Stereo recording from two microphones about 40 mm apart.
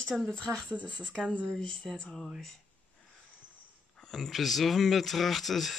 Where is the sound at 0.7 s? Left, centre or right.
Right.